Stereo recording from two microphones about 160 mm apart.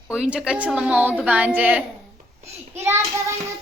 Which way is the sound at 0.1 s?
5° right (ahead or behind).